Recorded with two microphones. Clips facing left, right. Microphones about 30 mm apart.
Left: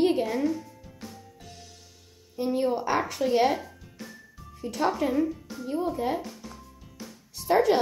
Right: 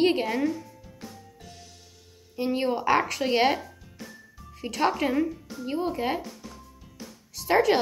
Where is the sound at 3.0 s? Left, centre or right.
Right.